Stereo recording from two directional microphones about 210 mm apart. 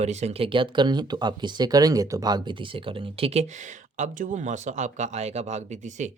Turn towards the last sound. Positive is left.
turn(degrees=-35)  # may be behind; listen again after turning